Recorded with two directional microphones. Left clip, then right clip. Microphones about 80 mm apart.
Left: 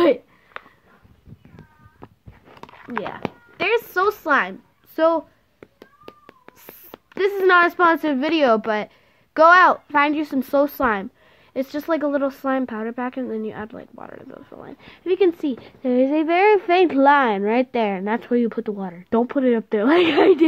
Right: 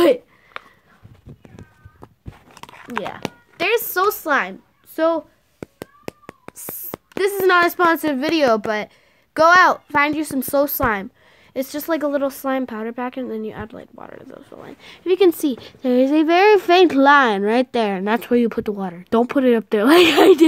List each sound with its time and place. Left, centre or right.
0.0 s a sound: centre
2.7 s speech: centre
4.3 s a woman's voice: centre
6.6 s speech: centre
15.0 s speech: right
15.8 s speech: right